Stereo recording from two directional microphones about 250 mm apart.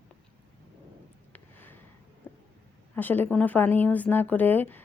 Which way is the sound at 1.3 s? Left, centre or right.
Centre.